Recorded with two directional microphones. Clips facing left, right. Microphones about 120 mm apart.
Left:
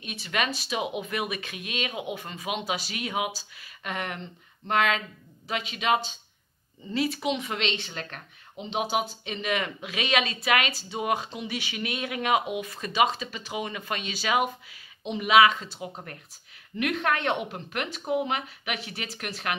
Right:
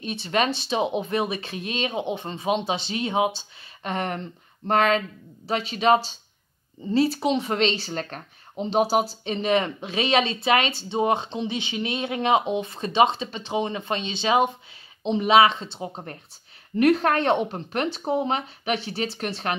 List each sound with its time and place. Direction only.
0.0 s speech: 30° right (ahead or behind)